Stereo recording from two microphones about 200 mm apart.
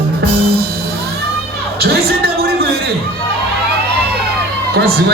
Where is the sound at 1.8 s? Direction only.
50° right (ahead or behind).